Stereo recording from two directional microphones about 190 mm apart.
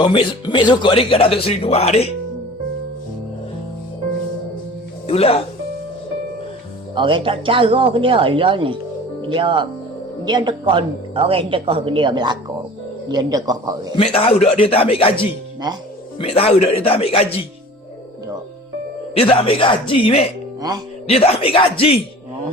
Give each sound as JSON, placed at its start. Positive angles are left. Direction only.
{"t": 0.0, "sound": "speech", "side_deg": 25}
{"t": 5.0, "sound": "speech", "side_deg": 30}
{"t": 6.9, "sound": "speech", "side_deg": -25}
{"t": 13.9, "sound": "speech", "side_deg": 30}
{"t": 16.1, "sound": "speech", "side_deg": 30}
{"t": 19.1, "sound": "speech", "side_deg": 30}
{"t": 20.6, "sound": "speech", "side_deg": -20}
{"t": 21.1, "sound": "speech", "side_deg": 30}